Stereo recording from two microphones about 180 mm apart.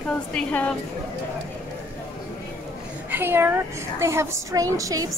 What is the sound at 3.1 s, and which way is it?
A woman's voice, 10° right (ahead or behind).